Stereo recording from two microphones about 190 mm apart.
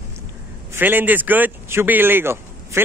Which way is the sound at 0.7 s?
10° right (ahead or behind).